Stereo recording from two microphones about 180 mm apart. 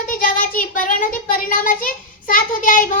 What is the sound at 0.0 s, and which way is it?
Speech, 50° left (ahead or behind).